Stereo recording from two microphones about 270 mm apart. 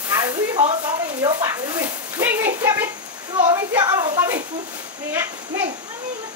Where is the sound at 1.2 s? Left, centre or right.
Centre.